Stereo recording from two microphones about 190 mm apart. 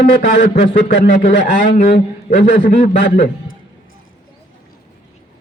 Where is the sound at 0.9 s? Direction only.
50° left (ahead or behind).